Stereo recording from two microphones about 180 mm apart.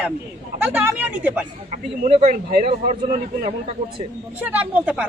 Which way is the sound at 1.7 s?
40° right (ahead or behind).